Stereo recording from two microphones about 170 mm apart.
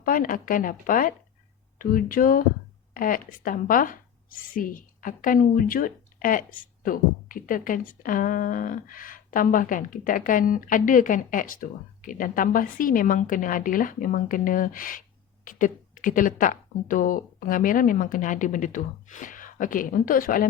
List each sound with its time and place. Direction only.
0.0 s a woman's voice: 55° left (ahead or behind)